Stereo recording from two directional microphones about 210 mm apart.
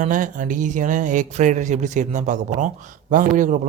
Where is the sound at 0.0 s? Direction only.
40° right (ahead or behind).